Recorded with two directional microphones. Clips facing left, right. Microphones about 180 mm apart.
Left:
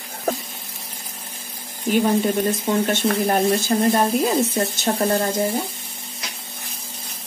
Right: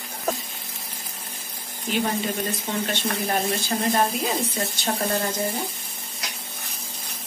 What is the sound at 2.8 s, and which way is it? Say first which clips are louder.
Speech: left 7 dB; 45° left (ahead or behind).